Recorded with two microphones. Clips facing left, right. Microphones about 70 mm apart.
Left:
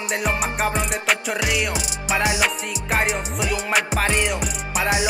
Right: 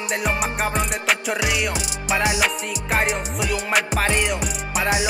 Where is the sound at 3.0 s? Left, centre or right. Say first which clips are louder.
Even; centre.